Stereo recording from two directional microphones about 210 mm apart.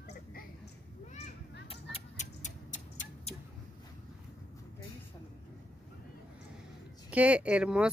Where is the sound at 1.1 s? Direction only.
30° left (ahead or behind).